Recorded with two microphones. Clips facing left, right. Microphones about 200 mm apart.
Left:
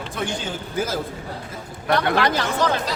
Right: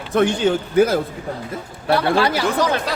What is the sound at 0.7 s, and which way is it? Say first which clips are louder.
Speech: right 9 dB; 60° right (ahead or behind).